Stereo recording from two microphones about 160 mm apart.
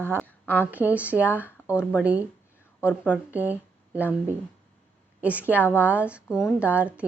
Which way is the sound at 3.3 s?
10° right (ahead or behind).